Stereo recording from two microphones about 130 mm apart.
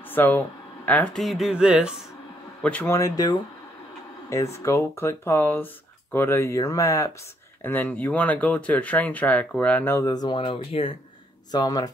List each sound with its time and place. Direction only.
0.1 s a woman's voice: 15° left (ahead or behind); by 2.0 s 5° right (ahead or behind)
2.6 s speech: 15° left (ahead or behind)
7.6 s speech: 15° left (ahead or behind); by 11.0 s 45° left (ahead or behind)
11.5 s speech: 30° left (ahead or behind)